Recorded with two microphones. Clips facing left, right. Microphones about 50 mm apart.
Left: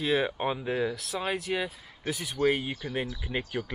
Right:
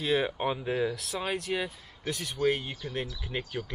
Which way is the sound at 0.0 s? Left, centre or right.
Centre.